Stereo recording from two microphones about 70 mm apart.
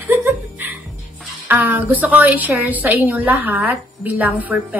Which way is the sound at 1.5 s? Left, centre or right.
Right.